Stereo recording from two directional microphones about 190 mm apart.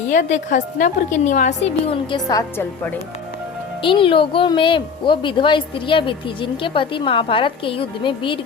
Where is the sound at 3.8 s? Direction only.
25° left (ahead or behind).